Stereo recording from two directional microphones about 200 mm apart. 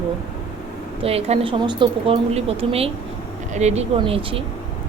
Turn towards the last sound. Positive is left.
turn(degrees=-30)  # may be behind; listen again after turning